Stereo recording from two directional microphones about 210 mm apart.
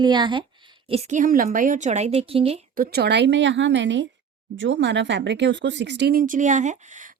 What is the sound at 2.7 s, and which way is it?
Speech, 45° right (ahead or behind).